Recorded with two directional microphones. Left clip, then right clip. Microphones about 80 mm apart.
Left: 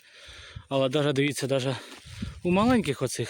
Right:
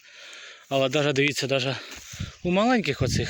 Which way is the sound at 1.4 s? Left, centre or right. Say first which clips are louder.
Right 2 dB; left.